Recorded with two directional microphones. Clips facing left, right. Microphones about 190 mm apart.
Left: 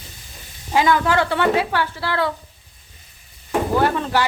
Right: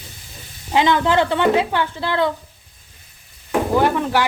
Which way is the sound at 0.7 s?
20° right (ahead or behind).